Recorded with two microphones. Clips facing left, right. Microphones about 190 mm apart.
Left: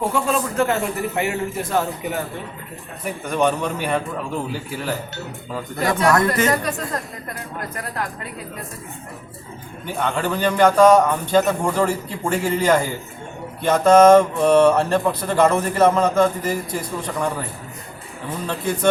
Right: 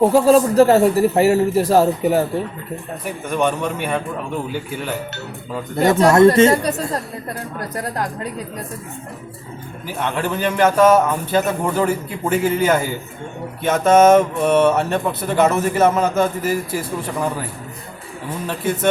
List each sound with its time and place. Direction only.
0.0 s speech: 35° right (ahead or behind)
3.2 s speech: centre (ahead or behind)
5.7 s speech: 25° right (ahead or behind)
9.8 s speech: 5° right (ahead or behind)
18.4 s speech: 5° right (ahead or behind)